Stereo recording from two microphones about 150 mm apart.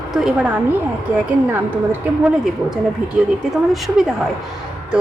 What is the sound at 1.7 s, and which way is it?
Speech, 10° right (ahead or behind).